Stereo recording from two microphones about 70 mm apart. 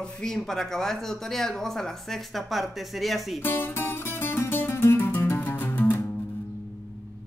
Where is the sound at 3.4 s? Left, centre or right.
Left.